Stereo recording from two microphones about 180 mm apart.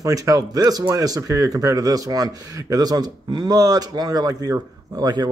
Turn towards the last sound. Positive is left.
turn(degrees=-20)  # may be behind; listen again after turning